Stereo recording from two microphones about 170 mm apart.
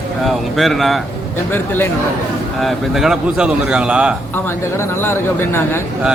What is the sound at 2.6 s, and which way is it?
A man's voice, centre (ahead or behind).